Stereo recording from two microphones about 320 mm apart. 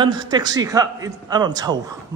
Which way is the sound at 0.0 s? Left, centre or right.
Centre.